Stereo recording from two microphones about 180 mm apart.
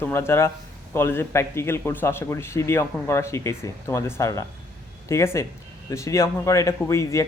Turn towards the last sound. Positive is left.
turn(degrees=15)  # may be behind; listen again after turning